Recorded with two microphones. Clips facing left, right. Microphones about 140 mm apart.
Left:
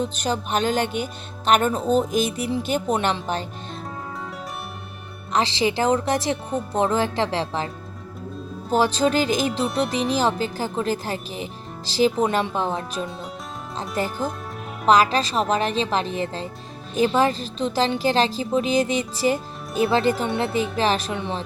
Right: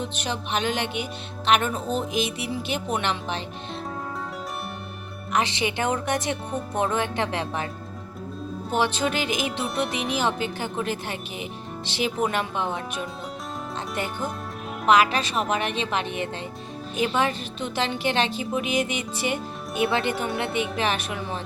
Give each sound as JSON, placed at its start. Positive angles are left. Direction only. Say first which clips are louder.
{"t": 0.0, "sound": "a woman's voice", "louder": "left 5 dB", "side_deg": 40}
{"t": 5.3, "sound": "a woman's voice", "louder": "left 3 dB", "side_deg": 35}
{"t": 8.7, "sound": "a woman's voice", "louder": "left 5 dB", "side_deg": 40}
{"t": 9.6, "sound": "speech", "louder": "left 3 dB", "side_deg": 0}
{"t": 10.1, "sound": "a woman's voice", "louder": "left 4 dB", "side_deg": 35}